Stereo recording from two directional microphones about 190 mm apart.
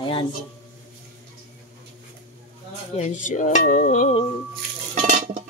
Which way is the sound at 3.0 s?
40° left (ahead or behind).